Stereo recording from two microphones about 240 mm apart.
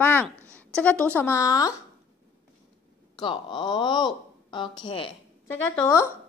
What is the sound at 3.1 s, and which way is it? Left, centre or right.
Speech, centre.